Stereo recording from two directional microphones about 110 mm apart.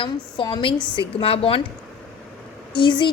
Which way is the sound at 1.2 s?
60° left (ahead or behind).